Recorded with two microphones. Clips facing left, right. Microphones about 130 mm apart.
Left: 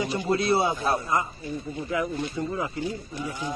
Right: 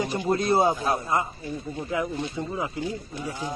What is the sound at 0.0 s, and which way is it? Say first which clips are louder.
Speech: even; 45° right (ahead or behind).